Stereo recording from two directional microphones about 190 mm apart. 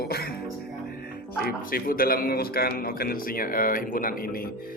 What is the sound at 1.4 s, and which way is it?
A man's voice, 50° left (ahead or behind).